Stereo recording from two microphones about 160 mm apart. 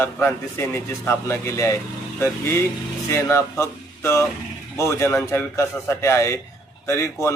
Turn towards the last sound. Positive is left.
turn(degrees=15)  # may be behind; listen again after turning